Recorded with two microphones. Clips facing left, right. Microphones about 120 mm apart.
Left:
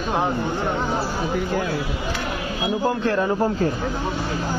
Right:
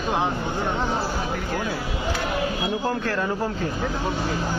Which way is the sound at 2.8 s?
20° left (ahead or behind).